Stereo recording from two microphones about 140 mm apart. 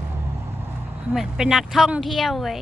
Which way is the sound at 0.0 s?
15° right (ahead or behind).